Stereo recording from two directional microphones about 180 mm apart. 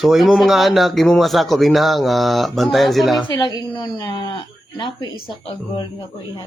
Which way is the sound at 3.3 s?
20° left (ahead or behind).